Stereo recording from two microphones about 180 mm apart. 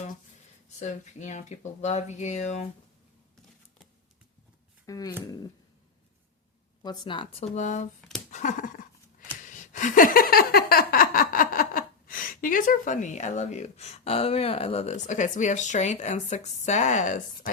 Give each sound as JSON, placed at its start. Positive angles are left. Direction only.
{"t": 0.8, "sound": "speech", "side_deg": 40}
{"t": 4.9, "sound": "speech", "side_deg": 20}
{"t": 6.8, "sound": "speech", "side_deg": 25}
{"t": 8.3, "sound": "a sound", "side_deg": 45}